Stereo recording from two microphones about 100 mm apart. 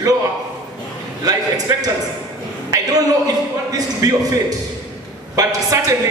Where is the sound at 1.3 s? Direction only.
40° right (ahead or behind).